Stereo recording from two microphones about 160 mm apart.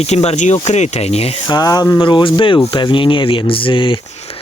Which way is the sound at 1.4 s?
25° left (ahead or behind).